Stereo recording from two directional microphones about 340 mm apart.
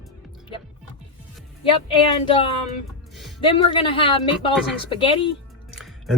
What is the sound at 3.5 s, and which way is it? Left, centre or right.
A woman's voice, centre.